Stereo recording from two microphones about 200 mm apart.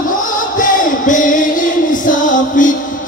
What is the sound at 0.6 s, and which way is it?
Music, 40° left (ahead or behind).